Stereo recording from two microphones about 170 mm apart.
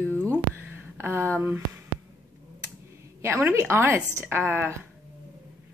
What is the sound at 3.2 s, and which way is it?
Speech, 15° right (ahead or behind).